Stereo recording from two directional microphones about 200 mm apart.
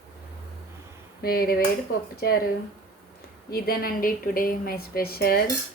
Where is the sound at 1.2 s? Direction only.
45° left (ahead or behind).